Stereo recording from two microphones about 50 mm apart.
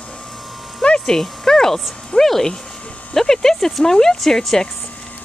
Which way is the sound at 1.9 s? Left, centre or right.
Centre.